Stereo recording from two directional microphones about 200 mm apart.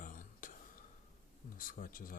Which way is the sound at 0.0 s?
40° left (ahead or behind).